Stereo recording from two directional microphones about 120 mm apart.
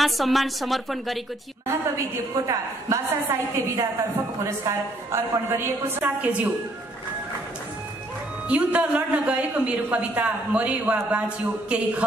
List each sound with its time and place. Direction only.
0.0 s a woman's voice: centre (ahead or behind)
2.4 s a woman's voice: 25° right (ahead or behind)
8.5 s a woman's voice: 10° right (ahead or behind)